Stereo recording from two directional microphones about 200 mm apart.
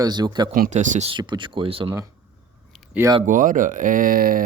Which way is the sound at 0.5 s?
40° right (ahead or behind).